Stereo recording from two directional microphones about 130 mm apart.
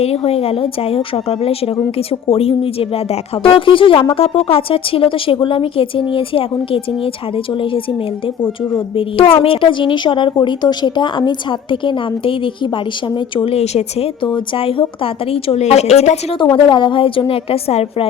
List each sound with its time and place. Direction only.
0.0 s a woman's voice: 50° left (ahead or behind)
9.0 s a woman's voice: 45° left (ahead or behind)
16.4 s a woman's voice: 35° left (ahead or behind)